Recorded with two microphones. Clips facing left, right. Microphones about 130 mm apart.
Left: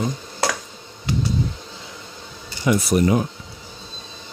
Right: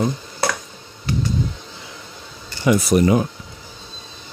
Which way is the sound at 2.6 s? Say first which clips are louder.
Right 2 dB; 90° right.